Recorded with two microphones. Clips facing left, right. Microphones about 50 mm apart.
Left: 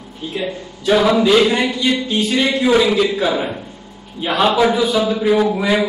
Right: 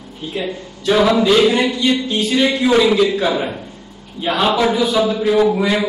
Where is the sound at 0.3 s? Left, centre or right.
Centre.